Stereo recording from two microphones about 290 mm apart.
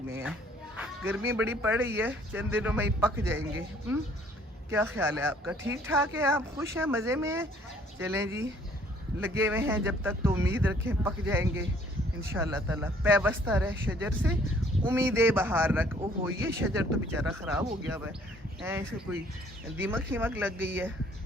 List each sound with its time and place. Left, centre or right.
0.8 s speech: centre
4.7 s speech: centre